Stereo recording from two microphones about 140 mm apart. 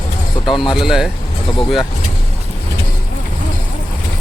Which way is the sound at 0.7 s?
5° right (ahead or behind).